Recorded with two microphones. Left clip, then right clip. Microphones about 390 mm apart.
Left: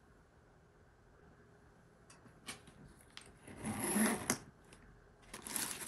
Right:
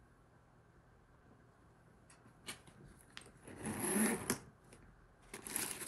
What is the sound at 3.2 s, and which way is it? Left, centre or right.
Sewing machine, centre.